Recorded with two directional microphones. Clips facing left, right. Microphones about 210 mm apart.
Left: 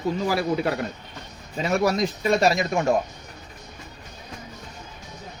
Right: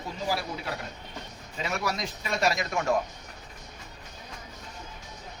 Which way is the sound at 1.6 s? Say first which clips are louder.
Left 10 dB; 45° left (ahead or behind).